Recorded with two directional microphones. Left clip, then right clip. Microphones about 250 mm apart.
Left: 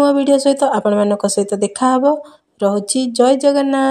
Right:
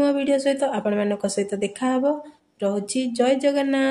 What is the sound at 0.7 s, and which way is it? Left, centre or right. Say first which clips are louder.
Speech: left 9 dB; centre.